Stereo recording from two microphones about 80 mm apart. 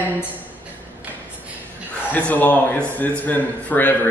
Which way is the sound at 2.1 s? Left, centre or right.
Left.